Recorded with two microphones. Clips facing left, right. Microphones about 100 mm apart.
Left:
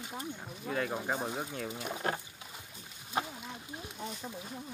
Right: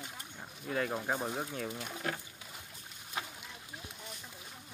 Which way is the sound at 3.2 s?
40° left (ahead or behind).